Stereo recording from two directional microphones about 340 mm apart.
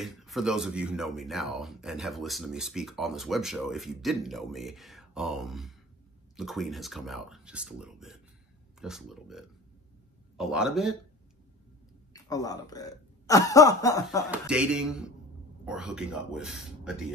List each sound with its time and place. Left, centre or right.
0.0 s speech: centre
12.1 s speech: centre
14.5 s speech: centre